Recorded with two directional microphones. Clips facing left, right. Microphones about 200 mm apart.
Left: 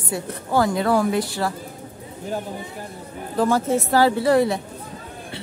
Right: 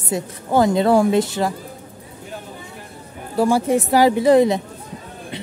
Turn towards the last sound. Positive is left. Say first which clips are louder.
# right 4 dB
turn(degrees=-20)  # may be behind; listen again after turning